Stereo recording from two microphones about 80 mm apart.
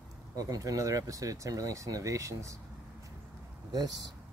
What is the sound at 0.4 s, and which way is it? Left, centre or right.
Speech, right.